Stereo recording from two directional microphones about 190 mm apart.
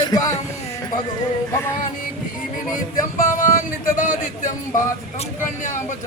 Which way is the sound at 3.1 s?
40° left (ahead or behind).